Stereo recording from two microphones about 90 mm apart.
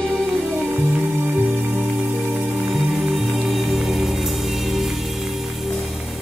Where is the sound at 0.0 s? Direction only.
5° left (ahead or behind).